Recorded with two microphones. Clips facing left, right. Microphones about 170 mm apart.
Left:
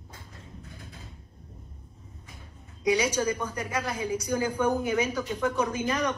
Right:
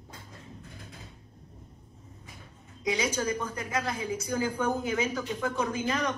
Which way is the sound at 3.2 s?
25° left (ahead or behind).